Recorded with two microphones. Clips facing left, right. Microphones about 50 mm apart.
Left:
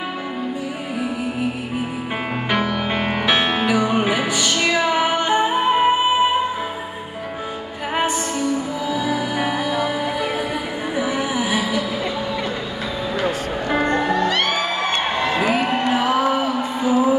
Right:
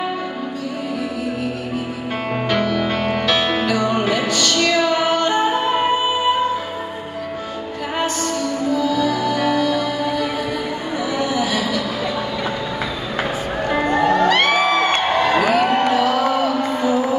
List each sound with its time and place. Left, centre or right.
2.5 s music: centre
8.0 s music: centre
14.1 s music: right
15.3 s a sound: left